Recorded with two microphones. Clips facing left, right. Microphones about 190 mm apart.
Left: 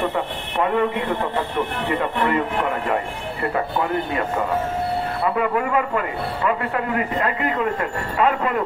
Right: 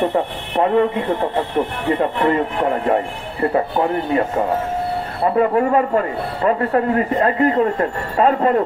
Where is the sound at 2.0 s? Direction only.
35° right (ahead or behind).